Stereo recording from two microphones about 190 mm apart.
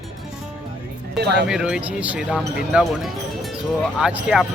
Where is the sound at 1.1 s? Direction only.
60° right (ahead or behind).